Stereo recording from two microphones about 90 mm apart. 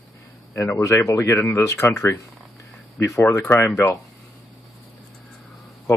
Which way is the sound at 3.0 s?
30° left (ahead or behind).